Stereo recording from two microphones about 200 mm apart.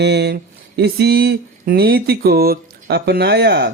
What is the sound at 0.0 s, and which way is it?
Speech, 60° right (ahead or behind).